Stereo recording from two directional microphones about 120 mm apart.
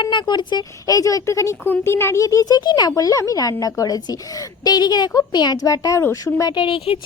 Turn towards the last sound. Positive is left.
turn(degrees=50)  # may be behind; listen again after turning